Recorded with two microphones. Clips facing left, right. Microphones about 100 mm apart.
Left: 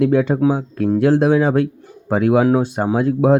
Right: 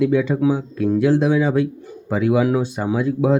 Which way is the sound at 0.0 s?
55° left (ahead or behind).